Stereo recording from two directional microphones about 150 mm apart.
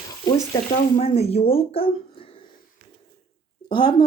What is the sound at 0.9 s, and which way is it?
A woman's voice, 45° left (ahead or behind).